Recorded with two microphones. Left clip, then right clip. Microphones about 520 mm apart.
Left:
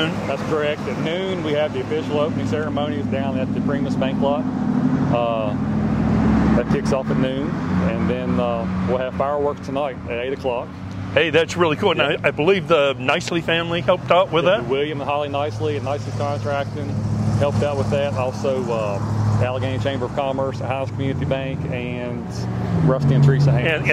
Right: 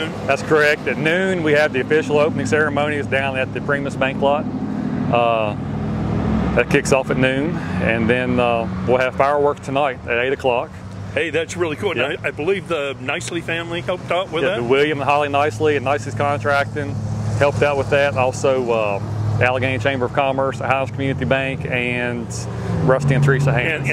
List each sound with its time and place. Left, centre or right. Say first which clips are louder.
0.3 s speech: right 11 dB; right
6.6 s speech: right 5 dB; right
11.1 s speech: left 4 dB; left
14.7 s speech: right 6 dB; right